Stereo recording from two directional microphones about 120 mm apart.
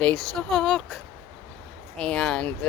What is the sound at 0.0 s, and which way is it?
Speech, 5° left (ahead or behind).